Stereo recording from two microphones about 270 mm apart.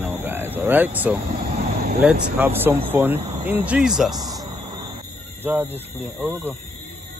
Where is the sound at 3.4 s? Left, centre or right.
Centre.